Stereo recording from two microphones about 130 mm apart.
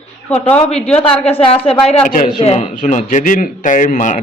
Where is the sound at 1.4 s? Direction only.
50° left (ahead or behind).